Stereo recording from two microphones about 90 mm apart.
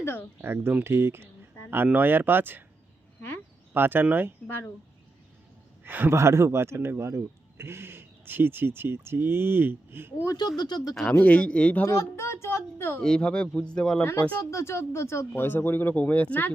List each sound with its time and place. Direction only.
0.0 s speech: 25° left (ahead or behind)
0.4 s a man's voice: 25° right (ahead or behind)
3.8 s a man's voice: 25° right (ahead or behind)
4.4 s speech: 20° left (ahead or behind)
5.8 s a man's voice: 20° right (ahead or behind)
10.6 s speech: 50° left (ahead or behind)
11.1 s a man's voice: 15° left (ahead or behind)
11.9 s speech: 30° left (ahead or behind)
13.0 s a man's voice: 10° left (ahead or behind)
14.0 s speech: 25° left (ahead or behind)
14.5 s speech: 30° left (ahead or behind)